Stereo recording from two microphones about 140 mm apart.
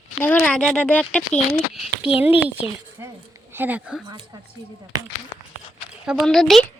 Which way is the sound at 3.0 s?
15° right (ahead or behind).